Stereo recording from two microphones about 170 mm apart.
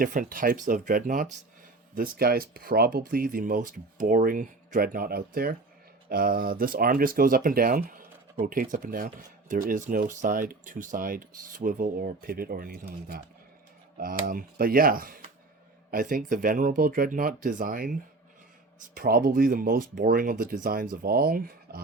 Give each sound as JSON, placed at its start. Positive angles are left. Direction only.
{"t": 0.0, "sound": "speech", "side_deg": -55}
{"t": 14.0, "sound": "speech", "side_deg": -55}